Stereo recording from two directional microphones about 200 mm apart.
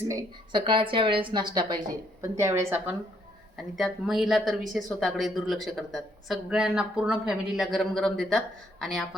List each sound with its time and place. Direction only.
0.1 s a woman's voice: 20° right (ahead or behind)
3.8 s speech: centre (ahead or behind)